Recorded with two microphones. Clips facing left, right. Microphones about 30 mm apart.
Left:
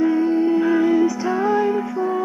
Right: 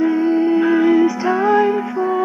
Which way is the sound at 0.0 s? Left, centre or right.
Centre.